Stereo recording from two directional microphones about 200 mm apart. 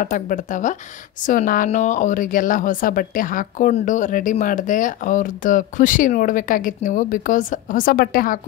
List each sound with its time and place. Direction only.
0.0 s speech: 40° left (ahead or behind)